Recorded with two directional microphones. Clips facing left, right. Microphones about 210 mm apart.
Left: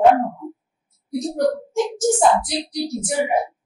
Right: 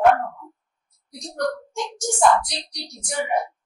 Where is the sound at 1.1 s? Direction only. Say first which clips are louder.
Left 7 dB; 5° left (ahead or behind).